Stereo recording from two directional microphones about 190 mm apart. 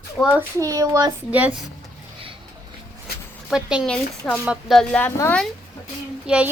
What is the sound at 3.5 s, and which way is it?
A woman's voice, 5° right (ahead or behind).